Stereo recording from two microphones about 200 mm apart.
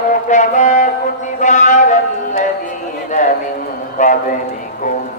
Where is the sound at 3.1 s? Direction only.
40° left (ahead or behind).